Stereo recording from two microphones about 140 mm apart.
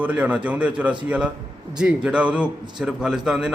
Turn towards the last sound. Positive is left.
turn(degrees=-5)  # may be behind; listen again after turning